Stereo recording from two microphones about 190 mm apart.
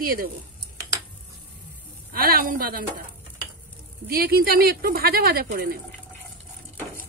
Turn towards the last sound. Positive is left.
turn(degrees=-50)  # may be behind; listen again after turning